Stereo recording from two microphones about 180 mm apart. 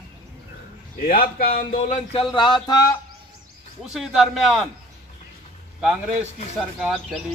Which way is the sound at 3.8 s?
5° right (ahead or behind).